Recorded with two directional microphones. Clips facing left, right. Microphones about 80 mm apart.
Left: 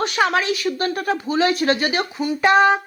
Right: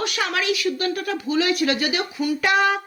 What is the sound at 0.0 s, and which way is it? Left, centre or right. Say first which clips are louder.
A woman's voice: left 5 dB; left.